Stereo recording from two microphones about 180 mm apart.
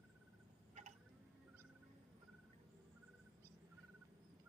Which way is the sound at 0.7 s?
40° right (ahead or behind).